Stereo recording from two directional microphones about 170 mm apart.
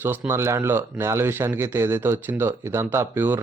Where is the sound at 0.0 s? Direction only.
10° right (ahead or behind).